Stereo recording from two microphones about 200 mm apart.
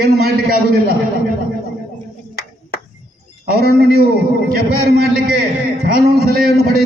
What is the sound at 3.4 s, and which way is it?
A man's voice, 50° right (ahead or behind).